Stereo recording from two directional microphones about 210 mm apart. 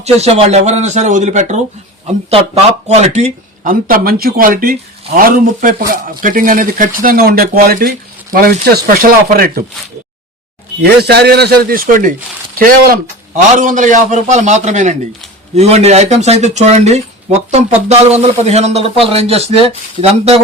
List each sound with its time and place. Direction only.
0.0 s speech: 30° right (ahead or behind)
2.8 s speech: 30° right (ahead or behind)
11.0 s speech: 50° right (ahead or behind); by 20.4 s 30° right (ahead or behind)